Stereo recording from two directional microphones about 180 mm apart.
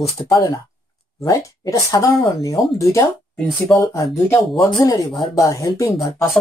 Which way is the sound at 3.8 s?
15° left (ahead or behind).